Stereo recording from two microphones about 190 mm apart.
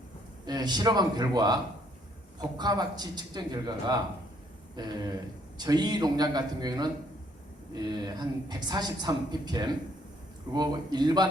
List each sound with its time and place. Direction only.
0.4 s a woman's voice: 20° right (ahead or behind)